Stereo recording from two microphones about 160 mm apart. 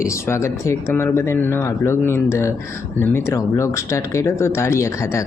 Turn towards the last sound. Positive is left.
turn(degrees=20)  # may be behind; listen again after turning